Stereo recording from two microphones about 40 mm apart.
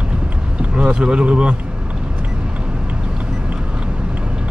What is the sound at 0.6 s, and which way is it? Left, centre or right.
Boat, right.